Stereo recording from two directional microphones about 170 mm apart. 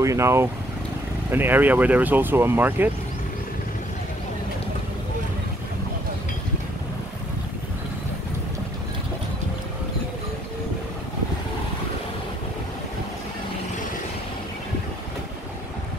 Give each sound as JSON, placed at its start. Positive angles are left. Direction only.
{"t": 0.0, "sound": "speech", "side_deg": -15}